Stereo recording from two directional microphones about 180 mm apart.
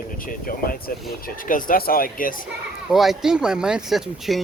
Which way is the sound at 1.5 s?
50° left (ahead or behind).